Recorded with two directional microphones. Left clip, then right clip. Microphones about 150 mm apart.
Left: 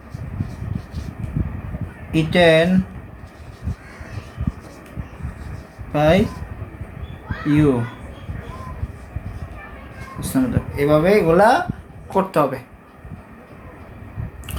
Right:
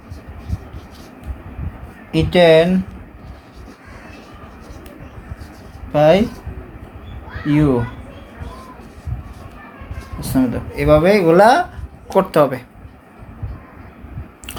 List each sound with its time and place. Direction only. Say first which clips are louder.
2.1 s speech: right 3 dB; 25° right (ahead or behind)
5.9 s speech: right 4 dB; 25° right (ahead or behind)
7.4 s speech: right 1 dB; 25° right (ahead or behind)
10.3 s speech: right 3 dB; 30° right (ahead or behind)
10.8 s speech: right 3 dB; 45° right (ahead or behind); by 12.5 s 65° right (ahead or behind)